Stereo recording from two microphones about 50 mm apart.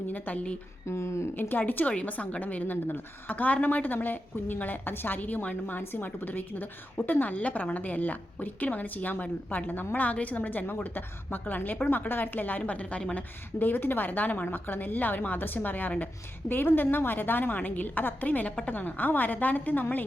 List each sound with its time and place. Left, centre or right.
0.9 s speech: left
1.4 s a woman's voice: left
13.1 s a woman's voice: left